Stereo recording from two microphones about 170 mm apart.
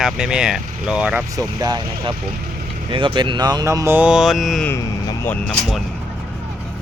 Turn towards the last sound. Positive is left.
turn(degrees=5)  # may be behind; listen again after turning